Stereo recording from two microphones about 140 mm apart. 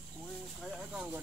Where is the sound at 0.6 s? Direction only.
5° right (ahead or behind).